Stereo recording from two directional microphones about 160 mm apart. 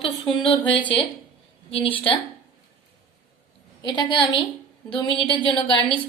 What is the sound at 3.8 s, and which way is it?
A woman's voice, 30° left (ahead or behind).